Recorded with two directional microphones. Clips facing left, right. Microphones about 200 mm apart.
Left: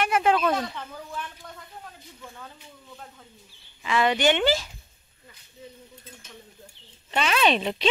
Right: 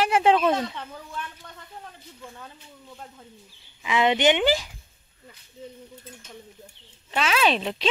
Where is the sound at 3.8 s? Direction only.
15° right (ahead or behind).